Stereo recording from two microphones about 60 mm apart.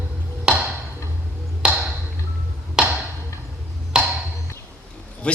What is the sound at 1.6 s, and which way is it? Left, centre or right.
Ping, centre.